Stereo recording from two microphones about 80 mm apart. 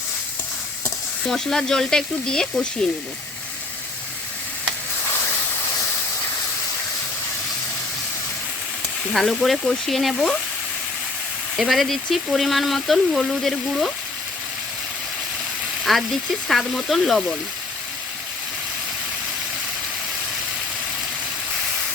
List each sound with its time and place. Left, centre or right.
1.2 s frying: centre
2.8 s speech: centre
9.1 s speech: centre
11.5 s speech: centre
15.8 s speech: centre